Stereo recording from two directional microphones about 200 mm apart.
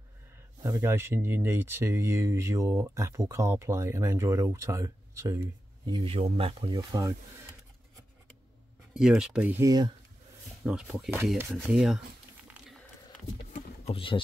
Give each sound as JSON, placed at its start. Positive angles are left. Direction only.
{"t": 0.7, "sound": "speech", "side_deg": -15}
{"t": 5.9, "sound": "speech", "side_deg": -25}
{"t": 8.9, "sound": "speech", "side_deg": 0}
{"t": 10.6, "sound": "speech", "side_deg": -5}
{"t": 13.5, "sound": "a sound", "side_deg": 30}